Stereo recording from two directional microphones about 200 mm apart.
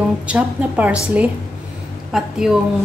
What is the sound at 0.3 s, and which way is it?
Speech, 10° right (ahead or behind).